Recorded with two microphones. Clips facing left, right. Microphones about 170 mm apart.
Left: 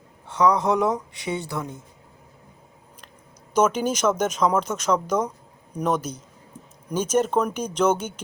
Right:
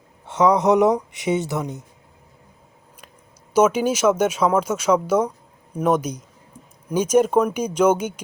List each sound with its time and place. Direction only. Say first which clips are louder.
0.3 s speech: right 4 dB; 20° right (ahead or behind)
3.5 s speech: right 4 dB; 10° right (ahead or behind)